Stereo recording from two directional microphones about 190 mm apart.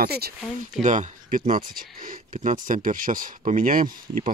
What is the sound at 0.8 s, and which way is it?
Speech, 40° right (ahead or behind).